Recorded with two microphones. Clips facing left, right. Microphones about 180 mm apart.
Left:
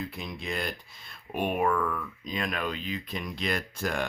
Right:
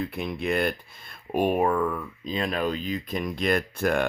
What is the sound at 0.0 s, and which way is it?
Speech, 60° right (ahead or behind).